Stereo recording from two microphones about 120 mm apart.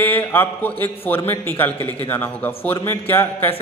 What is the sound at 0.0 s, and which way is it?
A man's voice, 15° left (ahead or behind).